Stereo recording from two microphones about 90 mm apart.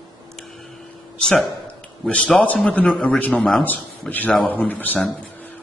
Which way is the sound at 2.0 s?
10° left (ahead or behind).